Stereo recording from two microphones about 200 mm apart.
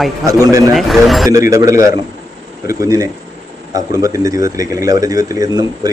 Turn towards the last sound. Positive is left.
turn(degrees=-20)  # may be behind; listen again after turning